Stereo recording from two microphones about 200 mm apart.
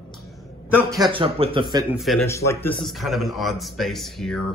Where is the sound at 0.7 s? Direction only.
20° right (ahead or behind).